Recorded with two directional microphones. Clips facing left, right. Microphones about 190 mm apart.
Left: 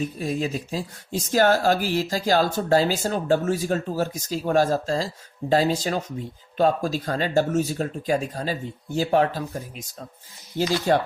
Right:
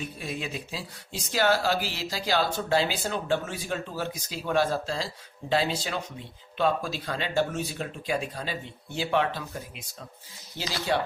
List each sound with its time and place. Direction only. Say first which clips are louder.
0.0 s speech: left 8 dB; 40° left (ahead or behind)